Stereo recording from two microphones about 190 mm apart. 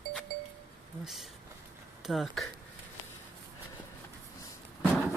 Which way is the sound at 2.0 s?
Centre (ahead or behind).